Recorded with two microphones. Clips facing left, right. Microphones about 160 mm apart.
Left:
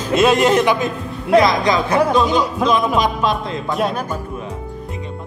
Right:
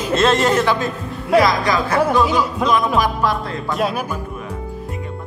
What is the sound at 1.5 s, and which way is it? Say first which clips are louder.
Speech: left 2 dB; 20° left (ahead or behind).